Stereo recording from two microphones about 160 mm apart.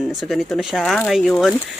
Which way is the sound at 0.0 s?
5° right (ahead or behind).